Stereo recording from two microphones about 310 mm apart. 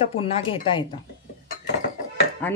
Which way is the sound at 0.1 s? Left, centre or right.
Centre.